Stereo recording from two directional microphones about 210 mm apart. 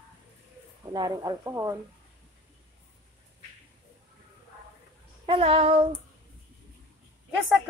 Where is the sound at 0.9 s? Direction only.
20° right (ahead or behind).